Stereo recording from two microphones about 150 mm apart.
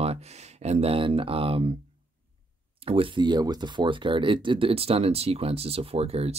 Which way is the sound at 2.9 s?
35° right (ahead or behind).